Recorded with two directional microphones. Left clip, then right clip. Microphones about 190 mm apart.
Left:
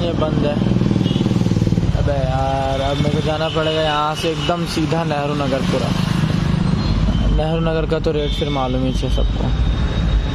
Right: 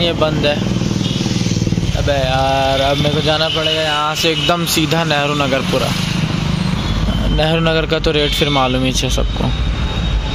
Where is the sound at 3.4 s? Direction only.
10° left (ahead or behind).